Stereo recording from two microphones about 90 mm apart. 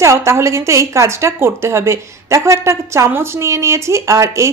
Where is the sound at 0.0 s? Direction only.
35° right (ahead or behind).